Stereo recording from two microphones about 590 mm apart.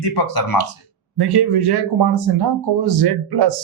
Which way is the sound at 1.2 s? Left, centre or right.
Right.